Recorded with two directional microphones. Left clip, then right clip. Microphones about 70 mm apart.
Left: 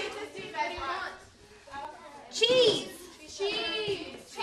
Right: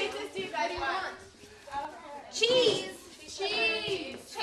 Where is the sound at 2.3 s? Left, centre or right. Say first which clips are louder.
Left 2 dB; centre.